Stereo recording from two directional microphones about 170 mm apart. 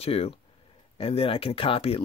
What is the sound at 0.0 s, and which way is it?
Speech, 35° left (ahead or behind).